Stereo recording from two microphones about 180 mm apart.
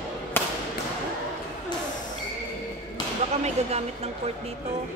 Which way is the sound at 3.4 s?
35° right (ahead or behind).